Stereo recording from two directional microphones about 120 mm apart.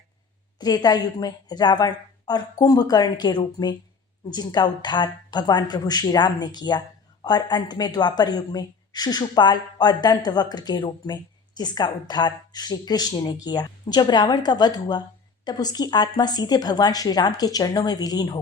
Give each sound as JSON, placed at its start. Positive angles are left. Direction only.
{"t": 0.6, "sound": "a woman's voice", "side_deg": 35}